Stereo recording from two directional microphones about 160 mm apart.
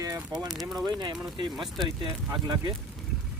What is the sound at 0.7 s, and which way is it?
Speech, 25° right (ahead or behind).